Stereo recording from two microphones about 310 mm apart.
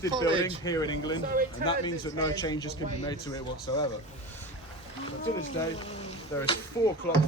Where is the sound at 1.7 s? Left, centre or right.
Centre.